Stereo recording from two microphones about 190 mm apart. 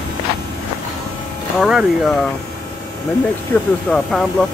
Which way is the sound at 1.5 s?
5° right (ahead or behind).